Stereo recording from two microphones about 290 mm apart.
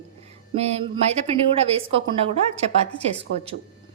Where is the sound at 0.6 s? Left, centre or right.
Centre.